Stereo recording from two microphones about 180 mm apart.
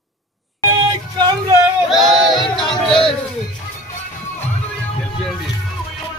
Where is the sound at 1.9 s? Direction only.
Centre (ahead or behind).